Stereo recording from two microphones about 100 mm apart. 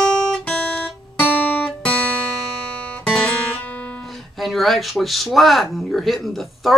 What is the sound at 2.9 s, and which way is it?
Music, 10° left (ahead or behind).